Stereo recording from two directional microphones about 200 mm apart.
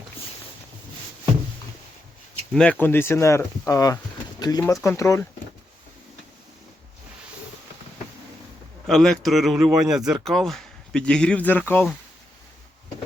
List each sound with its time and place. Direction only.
2.5 s speech: 5° left (ahead or behind)
8.9 s speech: centre (ahead or behind)